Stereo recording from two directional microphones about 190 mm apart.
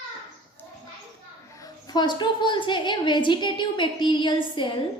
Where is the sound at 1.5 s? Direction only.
20° left (ahead or behind).